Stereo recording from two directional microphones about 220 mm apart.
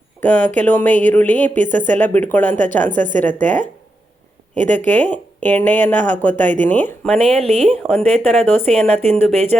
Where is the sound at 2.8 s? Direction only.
35° right (ahead or behind).